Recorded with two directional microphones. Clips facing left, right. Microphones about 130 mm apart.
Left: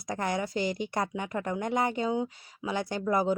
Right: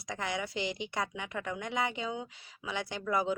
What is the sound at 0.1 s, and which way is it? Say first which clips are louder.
Speech: left 5 dB; 45° left (ahead or behind).